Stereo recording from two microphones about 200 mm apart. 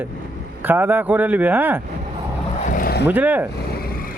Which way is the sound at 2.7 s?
45° left (ahead or behind).